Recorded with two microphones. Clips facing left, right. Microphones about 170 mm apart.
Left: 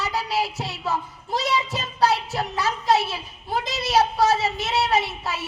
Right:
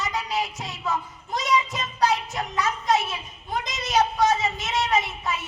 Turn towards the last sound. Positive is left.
turn(degrees=35)  # may be behind; listen again after turning